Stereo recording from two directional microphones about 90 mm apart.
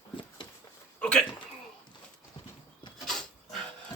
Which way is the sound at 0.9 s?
10° left (ahead or behind).